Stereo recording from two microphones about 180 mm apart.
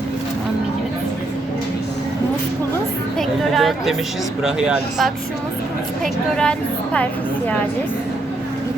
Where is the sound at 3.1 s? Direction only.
Centre (ahead or behind).